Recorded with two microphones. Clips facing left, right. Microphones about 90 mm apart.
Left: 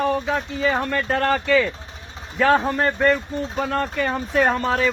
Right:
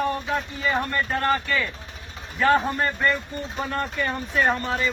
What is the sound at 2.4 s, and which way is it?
Speech, 90° left.